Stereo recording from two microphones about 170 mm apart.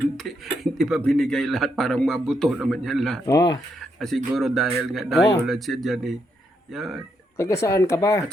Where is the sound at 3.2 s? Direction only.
20° left (ahead or behind).